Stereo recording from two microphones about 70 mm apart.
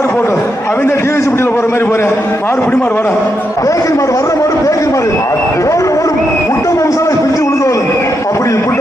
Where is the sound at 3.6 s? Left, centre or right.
Left.